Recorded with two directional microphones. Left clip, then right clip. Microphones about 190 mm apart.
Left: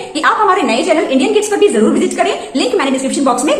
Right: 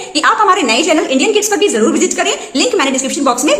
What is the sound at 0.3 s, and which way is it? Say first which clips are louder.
A woman's voice: right 1 dB; 35° right (ahead or behind).